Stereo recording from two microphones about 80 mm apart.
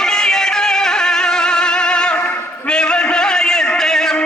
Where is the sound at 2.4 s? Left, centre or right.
Centre.